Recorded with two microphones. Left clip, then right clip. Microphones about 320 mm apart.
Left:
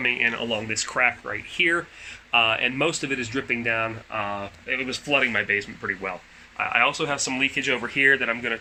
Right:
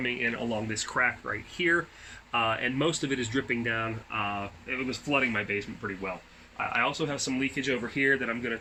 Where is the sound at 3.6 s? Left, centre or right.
Centre.